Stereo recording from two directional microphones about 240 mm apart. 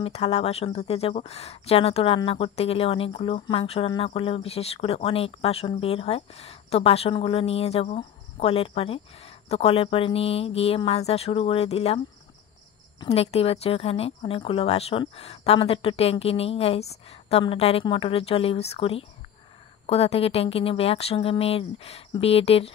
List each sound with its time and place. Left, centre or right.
0.0 s speech: left
13.0 s speech: left